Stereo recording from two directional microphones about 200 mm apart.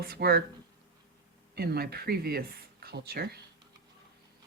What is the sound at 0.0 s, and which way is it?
Speech, 50° right (ahead or behind).